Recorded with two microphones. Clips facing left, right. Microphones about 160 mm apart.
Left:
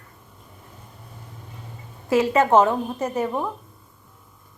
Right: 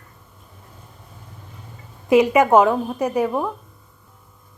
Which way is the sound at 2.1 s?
15° right (ahead or behind).